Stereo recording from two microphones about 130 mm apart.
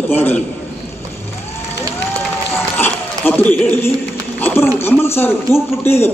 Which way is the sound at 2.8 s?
15° left (ahead or behind).